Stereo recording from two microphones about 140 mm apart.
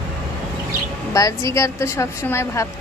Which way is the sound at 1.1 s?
25° left (ahead or behind).